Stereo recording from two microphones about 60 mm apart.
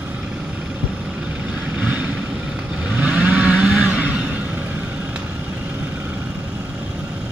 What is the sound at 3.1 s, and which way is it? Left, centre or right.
Vehicle, right.